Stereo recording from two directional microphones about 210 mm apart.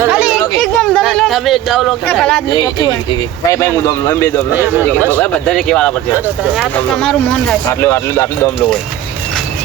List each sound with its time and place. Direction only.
0.0 s a sound: 5° right (ahead or behind)
3.5 s speech: 15° left (ahead or behind)
4.5 s speech: 10° right (ahead or behind)
5.1 s speech: 5° left (ahead or behind)
6.1 s speech: 5° right (ahead or behind); by 8.3 s 10° left (ahead or behind)